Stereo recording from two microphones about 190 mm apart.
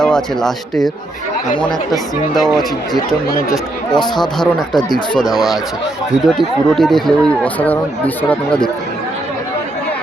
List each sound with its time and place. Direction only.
0.0 s speech: 5° left (ahead or behind)
3.5 s speech: 20° left (ahead or behind)
6.2 s speech: centre (ahead or behind)